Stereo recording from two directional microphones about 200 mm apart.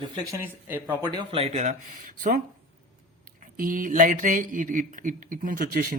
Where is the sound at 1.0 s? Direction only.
25° right (ahead or behind).